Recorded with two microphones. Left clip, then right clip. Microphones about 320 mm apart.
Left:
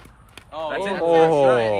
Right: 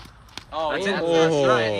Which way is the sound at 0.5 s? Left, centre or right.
Right.